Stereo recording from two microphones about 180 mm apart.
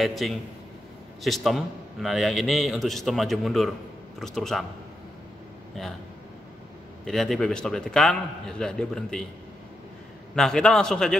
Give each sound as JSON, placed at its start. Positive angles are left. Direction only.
{"t": 0.0, "sound": "a man's voice", "side_deg": 0}
{"t": 7.1, "sound": "a man's voice", "side_deg": 0}
{"t": 10.3, "sound": "a man's voice", "side_deg": 5}